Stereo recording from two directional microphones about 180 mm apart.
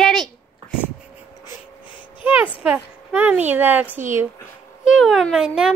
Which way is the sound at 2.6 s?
5° right (ahead or behind).